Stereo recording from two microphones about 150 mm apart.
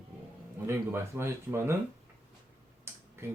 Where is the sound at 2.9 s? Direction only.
15° right (ahead or behind).